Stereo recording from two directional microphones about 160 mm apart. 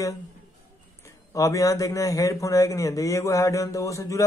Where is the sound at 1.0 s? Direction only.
20° left (ahead or behind).